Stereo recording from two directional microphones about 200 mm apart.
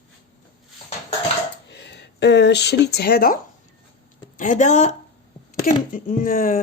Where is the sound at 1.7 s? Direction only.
60° left (ahead or behind).